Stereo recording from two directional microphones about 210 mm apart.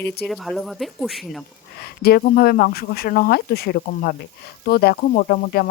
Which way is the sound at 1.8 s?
50° left (ahead or behind).